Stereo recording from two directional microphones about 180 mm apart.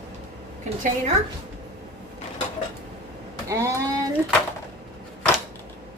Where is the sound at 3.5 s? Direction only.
15° right (ahead or behind).